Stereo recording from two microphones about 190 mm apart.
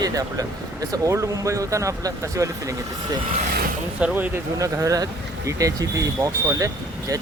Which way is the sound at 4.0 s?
10° right (ahead or behind).